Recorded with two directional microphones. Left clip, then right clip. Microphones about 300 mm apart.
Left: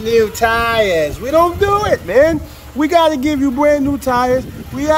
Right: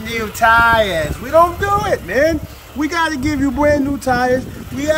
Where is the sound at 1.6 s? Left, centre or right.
Centre.